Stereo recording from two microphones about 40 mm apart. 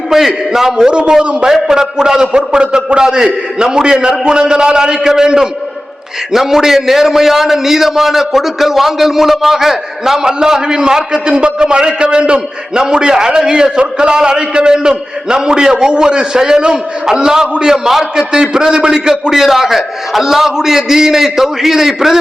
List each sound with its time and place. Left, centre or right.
0.1 s a man's voice: centre
0.9 s a man's voice: right
1.5 s a man's voice: centre